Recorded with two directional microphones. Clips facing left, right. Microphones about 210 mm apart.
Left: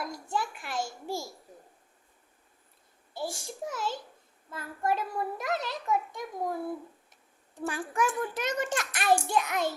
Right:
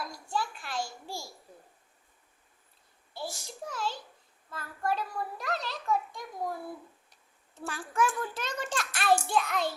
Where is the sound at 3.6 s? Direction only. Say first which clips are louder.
Left 2 dB; 20° left (ahead or behind).